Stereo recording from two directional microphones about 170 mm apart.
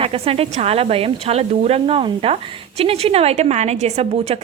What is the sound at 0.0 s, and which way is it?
Speech, 35° right (ahead or behind).